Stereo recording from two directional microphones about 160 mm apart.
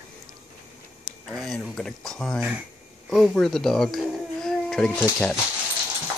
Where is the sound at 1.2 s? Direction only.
Centre (ahead or behind).